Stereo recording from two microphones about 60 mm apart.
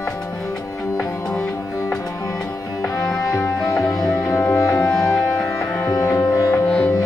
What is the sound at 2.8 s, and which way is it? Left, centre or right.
Music, centre.